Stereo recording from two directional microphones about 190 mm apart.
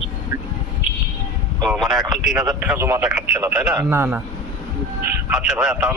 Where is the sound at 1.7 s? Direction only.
Centre (ahead or behind).